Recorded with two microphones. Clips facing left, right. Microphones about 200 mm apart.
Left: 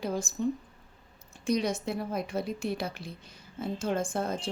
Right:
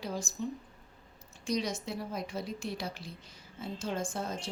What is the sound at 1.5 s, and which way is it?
A woman's voice, 55° left (ahead or behind).